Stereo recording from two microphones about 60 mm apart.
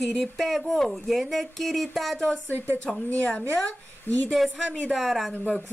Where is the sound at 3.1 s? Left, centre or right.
Left.